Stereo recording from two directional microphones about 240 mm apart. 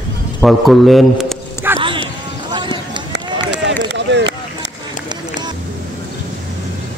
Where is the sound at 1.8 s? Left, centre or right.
Right.